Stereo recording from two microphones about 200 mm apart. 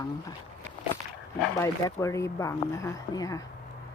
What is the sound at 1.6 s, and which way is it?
Speech, 15° left (ahead or behind).